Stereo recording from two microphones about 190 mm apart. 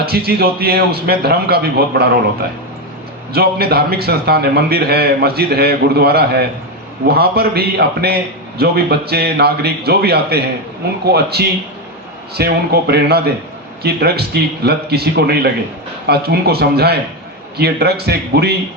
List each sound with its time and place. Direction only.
0.0 s a man's voice: 55° right (ahead or behind)
3.3 s a man's voice: 55° right (ahead or behind)